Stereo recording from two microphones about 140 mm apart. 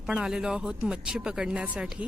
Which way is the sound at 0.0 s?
5° right (ahead or behind).